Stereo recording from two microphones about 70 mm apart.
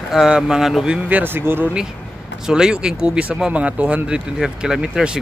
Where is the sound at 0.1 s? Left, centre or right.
Centre.